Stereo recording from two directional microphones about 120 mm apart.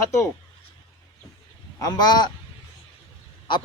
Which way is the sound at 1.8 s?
35° left (ahead or behind).